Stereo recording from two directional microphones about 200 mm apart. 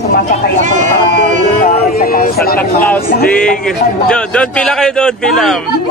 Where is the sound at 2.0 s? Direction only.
50° left (ahead or behind).